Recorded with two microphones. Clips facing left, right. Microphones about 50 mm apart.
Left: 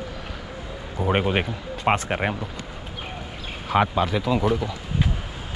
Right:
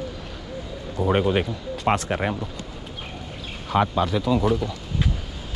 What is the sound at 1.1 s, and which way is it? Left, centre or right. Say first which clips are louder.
Speech: right 1 dB; left.